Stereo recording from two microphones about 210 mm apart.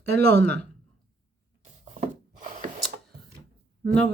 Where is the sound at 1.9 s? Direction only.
40° right (ahead or behind).